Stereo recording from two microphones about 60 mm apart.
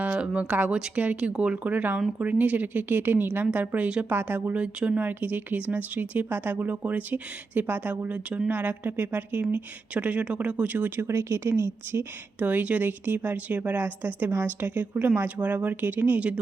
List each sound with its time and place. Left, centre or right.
0.0 s speech: right